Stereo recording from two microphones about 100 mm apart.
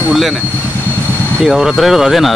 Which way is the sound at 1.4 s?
5° right (ahead or behind).